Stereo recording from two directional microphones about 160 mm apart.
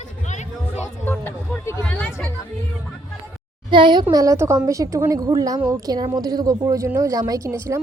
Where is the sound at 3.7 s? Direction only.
30° right (ahead or behind).